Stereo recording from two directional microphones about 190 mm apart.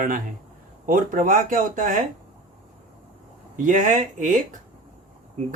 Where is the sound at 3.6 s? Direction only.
40° right (ahead or behind).